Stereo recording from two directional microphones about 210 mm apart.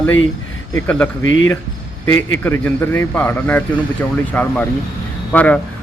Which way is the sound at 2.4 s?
10° left (ahead or behind).